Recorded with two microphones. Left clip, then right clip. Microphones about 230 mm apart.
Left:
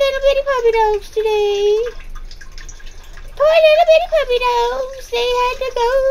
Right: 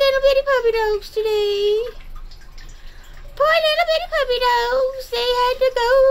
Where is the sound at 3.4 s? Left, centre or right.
Centre.